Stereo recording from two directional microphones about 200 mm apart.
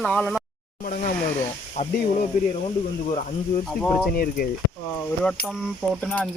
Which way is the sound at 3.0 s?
35° left (ahead or behind).